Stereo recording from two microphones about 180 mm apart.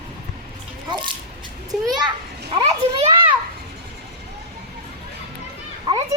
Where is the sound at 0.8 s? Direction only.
25° right (ahead or behind).